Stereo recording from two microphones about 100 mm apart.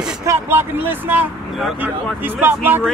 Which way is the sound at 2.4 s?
20° right (ahead or behind).